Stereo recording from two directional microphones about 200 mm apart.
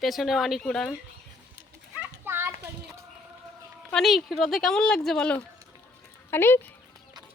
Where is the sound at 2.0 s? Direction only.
10° right (ahead or behind).